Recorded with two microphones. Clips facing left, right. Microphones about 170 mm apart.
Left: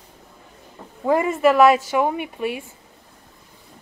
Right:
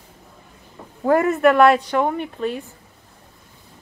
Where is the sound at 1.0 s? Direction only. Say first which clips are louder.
Right 2 dB; centre (ahead or behind).